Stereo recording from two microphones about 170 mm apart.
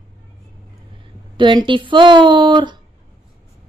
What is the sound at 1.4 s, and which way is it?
Speech, 30° right (ahead or behind).